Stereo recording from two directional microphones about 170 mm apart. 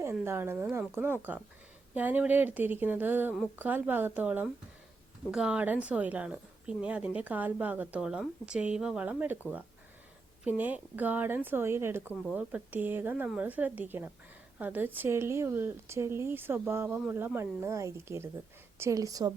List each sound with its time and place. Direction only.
0.0 s speech: 15° right (ahead or behind)
10.4 s speech: 10° right (ahead or behind)